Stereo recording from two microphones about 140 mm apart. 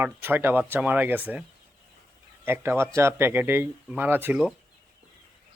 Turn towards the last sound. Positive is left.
turn(degrees=-15)  # may be behind; listen again after turning